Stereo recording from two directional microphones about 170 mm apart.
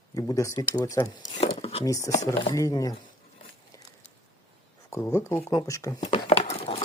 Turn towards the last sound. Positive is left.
turn(degrees=35)  # may be behind; listen again after turning